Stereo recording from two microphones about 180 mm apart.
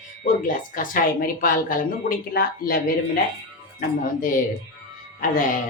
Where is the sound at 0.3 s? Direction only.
45° left (ahead or behind).